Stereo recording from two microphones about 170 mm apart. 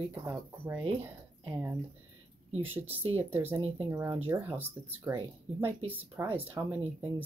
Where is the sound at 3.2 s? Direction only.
10° right (ahead or behind).